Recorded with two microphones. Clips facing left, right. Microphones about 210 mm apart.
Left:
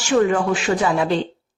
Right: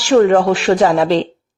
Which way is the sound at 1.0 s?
90° right.